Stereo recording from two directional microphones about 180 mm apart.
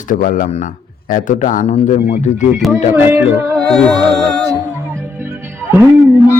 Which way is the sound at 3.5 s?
5° left (ahead or behind).